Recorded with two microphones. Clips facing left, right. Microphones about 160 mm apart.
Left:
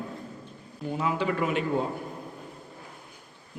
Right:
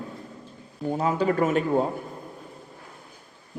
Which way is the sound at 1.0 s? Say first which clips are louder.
Right 4 dB; 40° right (ahead or behind).